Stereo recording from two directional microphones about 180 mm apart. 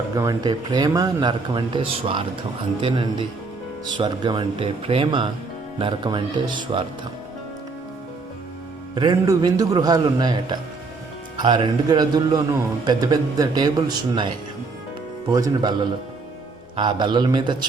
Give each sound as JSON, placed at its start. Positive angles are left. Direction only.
{"t": 0.2, "sound": "speech", "side_deg": -20}
{"t": 9.0, "sound": "speech", "side_deg": -25}
{"t": 15.3, "sound": "speech", "side_deg": -20}
{"t": 16.7, "sound": "speech", "side_deg": -25}